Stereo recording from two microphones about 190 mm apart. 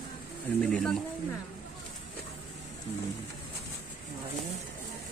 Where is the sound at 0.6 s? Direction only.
5° left (ahead or behind).